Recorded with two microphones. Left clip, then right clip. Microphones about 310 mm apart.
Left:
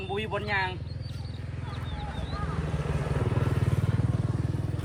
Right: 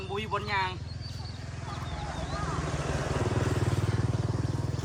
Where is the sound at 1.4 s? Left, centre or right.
Centre; by 4.4 s right.